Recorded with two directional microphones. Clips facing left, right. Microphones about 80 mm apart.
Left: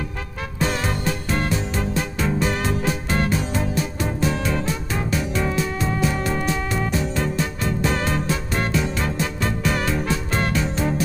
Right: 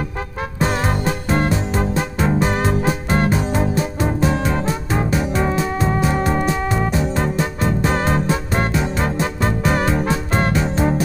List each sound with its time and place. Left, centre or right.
0.6 s music: right
6.4 s music: centre
7.8 s music: right